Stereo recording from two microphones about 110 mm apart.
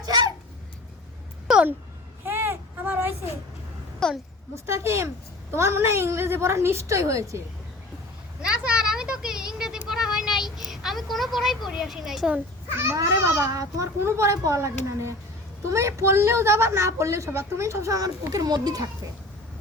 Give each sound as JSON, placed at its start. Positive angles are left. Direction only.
{"t": 0.0, "sound": "a sound", "side_deg": -35}
{"t": 2.2, "sound": "a sound", "side_deg": -20}
{"t": 4.0, "sound": "a woman's voice", "side_deg": 5}
{"t": 4.6, "sound": "a woman's voice", "side_deg": -25}
{"t": 8.4, "sound": "a woman's voice", "side_deg": -10}
{"t": 12.7, "sound": "a woman's voice", "side_deg": -25}
{"t": 15.7, "sound": "a woman's voice", "side_deg": -25}